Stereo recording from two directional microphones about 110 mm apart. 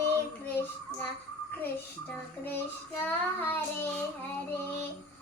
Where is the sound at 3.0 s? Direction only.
20° left (ahead or behind).